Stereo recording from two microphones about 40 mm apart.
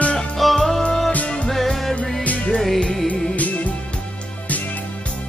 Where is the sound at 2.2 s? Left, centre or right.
Left.